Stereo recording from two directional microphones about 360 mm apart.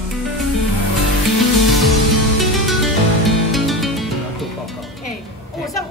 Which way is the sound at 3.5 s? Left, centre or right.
Centre.